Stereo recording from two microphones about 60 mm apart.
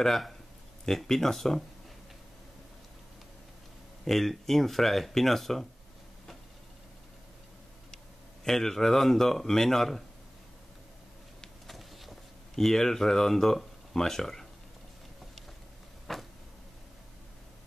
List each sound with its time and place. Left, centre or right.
0.0 s speech: centre
4.0 s speech: centre
8.5 s speech: centre
11.4 s a sound: centre
16.1 s vehicle: centre